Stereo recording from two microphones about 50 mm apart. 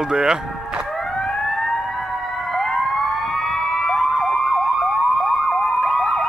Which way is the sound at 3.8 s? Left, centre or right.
Centre.